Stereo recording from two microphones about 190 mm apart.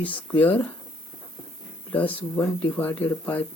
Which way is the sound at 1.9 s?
10° left (ahead or behind).